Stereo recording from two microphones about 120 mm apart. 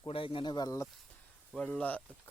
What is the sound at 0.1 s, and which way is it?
Speech, 50° left (ahead or behind).